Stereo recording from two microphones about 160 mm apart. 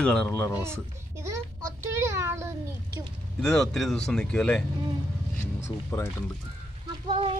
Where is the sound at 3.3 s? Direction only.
5° left (ahead or behind).